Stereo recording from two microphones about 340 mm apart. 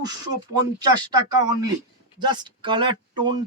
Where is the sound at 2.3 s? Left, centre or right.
Centre.